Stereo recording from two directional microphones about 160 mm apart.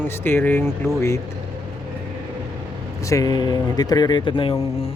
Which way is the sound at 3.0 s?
20° left (ahead or behind).